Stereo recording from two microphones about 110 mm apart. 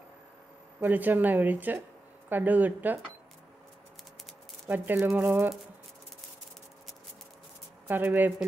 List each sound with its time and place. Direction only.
0.7 s speech: 15° right (ahead or behind)
4.6 s speech: 15° right (ahead or behind)
7.9 s speech: 15° right (ahead or behind)